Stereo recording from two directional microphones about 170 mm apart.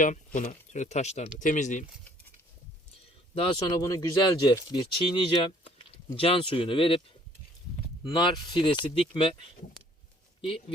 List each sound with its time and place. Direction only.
0.0 s speech: 50° left (ahead or behind)
3.3 s speech: 35° left (ahead or behind)
3.8 s speech: 20° left (ahead or behind)
8.0 s speech: 25° left (ahead or behind)